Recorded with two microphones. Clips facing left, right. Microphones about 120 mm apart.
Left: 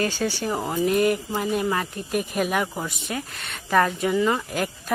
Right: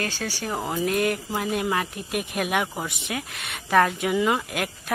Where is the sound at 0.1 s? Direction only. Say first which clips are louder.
Left 6 dB; 50° left (ahead or behind).